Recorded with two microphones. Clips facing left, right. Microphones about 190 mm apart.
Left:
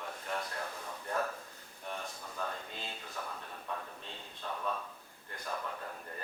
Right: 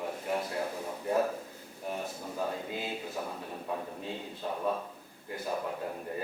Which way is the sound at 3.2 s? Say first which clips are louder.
Right 6 dB; 25° right (ahead or behind).